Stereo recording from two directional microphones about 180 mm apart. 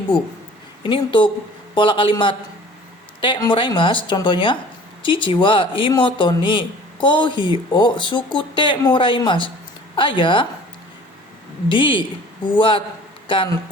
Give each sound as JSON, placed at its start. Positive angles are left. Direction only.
{"t": 0.8, "sound": "a man's voice", "side_deg": 25}
{"t": 11.7, "sound": "a man's voice", "side_deg": 25}